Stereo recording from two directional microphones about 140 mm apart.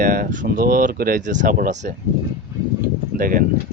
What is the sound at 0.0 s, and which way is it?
Speech, 70° right (ahead or behind).